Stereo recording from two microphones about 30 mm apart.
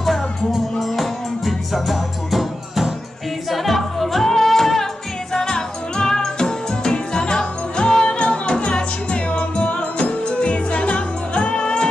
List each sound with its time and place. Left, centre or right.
0.7 s music: centre
5.3 s music: left